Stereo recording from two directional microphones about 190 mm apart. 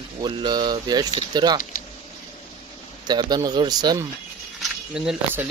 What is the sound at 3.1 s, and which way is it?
Speech, 20° right (ahead or behind).